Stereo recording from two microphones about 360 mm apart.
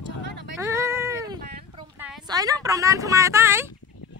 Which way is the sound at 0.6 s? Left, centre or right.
Centre.